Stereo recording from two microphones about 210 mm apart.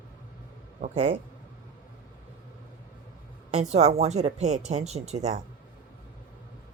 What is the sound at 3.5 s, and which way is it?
A woman's voice, 30° right (ahead or behind).